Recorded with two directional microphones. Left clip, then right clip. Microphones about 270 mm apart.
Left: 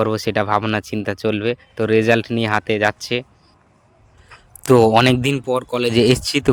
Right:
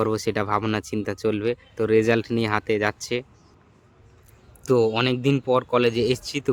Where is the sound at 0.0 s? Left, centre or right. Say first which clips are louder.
Left 5 dB; centre.